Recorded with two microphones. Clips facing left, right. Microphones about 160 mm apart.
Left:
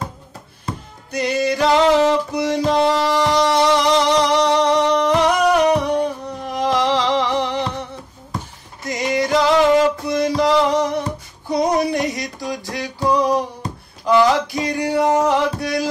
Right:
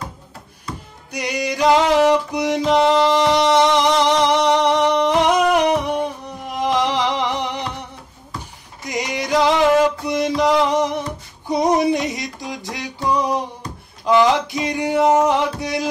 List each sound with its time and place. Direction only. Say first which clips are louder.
1.1 s music: left 4 dB; 15° right (ahead or behind)
8.8 s music: left 4 dB; 20° right (ahead or behind)